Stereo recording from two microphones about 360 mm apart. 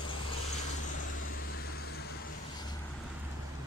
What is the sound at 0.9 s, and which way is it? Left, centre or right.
Vehicle, left.